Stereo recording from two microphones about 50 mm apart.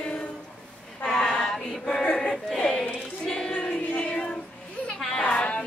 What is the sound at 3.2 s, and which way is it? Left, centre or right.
Child singing, centre.